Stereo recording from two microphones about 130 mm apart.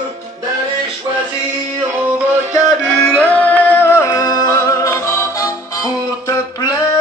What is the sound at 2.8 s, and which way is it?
Music, 5° left (ahead or behind).